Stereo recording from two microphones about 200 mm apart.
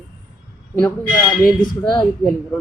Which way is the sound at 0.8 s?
10° left (ahead or behind).